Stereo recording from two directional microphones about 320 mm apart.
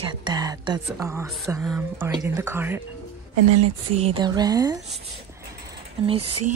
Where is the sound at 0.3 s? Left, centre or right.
Centre.